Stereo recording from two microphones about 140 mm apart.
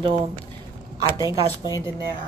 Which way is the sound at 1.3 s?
25° right (ahead or behind).